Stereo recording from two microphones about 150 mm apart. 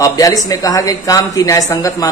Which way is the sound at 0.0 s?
20° left (ahead or behind).